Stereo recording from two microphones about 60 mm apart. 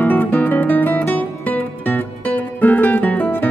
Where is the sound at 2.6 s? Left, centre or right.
Left.